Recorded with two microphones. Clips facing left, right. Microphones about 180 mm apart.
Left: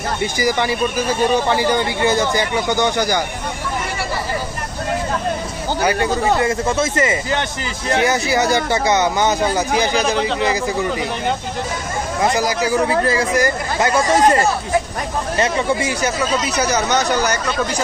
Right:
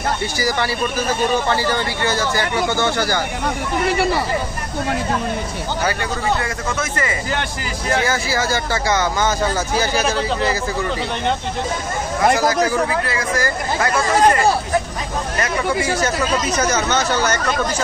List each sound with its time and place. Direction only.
0.2 s speech: 20° left (ahead or behind)
6.4 s speech: 25° left (ahead or behind)
12.9 s speech: 35° left (ahead or behind)
13.4 s speech: 20° left (ahead or behind)
15.4 s speech: 20° left (ahead or behind)